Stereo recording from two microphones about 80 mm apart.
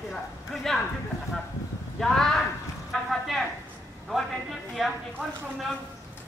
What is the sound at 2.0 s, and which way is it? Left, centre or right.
Speech, centre.